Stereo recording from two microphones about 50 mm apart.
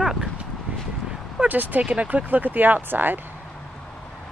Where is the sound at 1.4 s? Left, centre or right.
Right.